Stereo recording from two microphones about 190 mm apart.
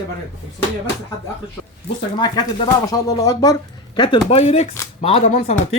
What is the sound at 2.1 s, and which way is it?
Speech, 20° left (ahead or behind).